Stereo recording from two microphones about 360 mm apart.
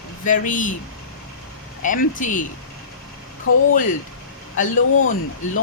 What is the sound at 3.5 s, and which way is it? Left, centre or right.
Speech, left.